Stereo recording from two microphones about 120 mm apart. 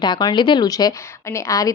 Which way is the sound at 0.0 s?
35° left (ahead or behind).